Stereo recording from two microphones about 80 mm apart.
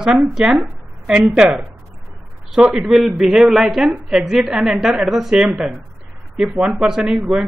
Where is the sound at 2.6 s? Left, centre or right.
Centre.